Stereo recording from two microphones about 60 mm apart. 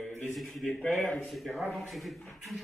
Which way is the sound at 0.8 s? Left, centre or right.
Left.